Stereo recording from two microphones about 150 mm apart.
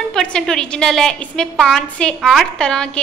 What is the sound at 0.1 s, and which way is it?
A woman's voice, 5° left (ahead or behind).